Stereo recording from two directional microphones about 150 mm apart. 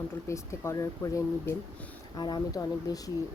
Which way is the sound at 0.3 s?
20° left (ahead or behind).